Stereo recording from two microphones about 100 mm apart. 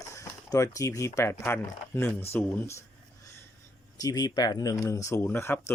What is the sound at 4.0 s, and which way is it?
Speech, 40° left (ahead or behind).